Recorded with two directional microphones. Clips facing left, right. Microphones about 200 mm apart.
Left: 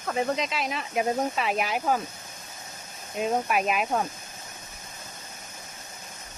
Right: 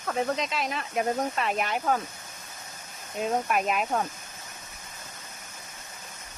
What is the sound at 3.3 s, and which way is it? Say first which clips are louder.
Speech: left 1 dB; 5° left (ahead or behind).